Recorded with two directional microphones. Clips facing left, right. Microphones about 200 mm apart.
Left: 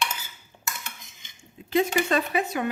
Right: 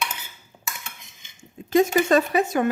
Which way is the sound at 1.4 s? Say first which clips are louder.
Right 5 dB; 45° right (ahead or behind).